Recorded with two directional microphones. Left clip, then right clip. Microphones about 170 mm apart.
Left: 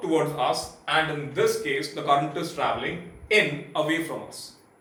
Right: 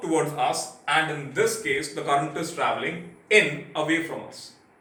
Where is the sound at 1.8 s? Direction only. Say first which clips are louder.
Left 3 dB; 30° left (ahead or behind).